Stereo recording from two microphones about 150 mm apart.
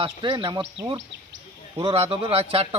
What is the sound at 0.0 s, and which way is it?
Speech, 30° right (ahead or behind).